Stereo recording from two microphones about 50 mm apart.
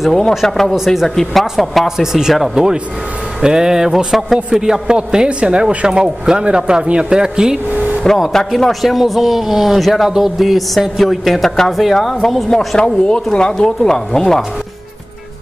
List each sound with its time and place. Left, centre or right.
0.0 s speech: centre
0.7 s speech: centre
1.0 s a man's voice: centre
7.7 s a sound: right
8.5 s speech: centre